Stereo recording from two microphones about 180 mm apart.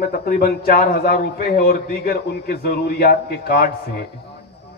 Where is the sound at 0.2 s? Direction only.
60° left (ahead or behind).